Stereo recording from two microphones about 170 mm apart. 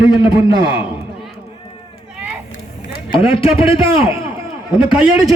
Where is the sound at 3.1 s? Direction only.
35° left (ahead or behind).